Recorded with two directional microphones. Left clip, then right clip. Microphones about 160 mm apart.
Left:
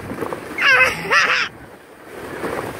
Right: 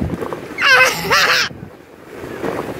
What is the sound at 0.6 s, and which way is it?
Crow, 15° right (ahead or behind).